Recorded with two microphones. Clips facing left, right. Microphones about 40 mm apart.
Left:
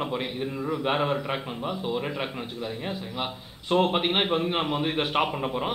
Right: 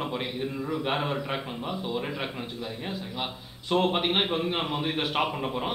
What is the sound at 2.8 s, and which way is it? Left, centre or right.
A man's voice, centre.